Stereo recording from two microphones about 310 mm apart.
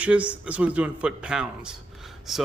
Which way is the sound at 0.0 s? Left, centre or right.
Centre.